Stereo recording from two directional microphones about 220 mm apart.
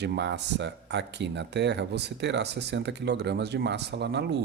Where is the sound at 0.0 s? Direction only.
50° right (ahead or behind).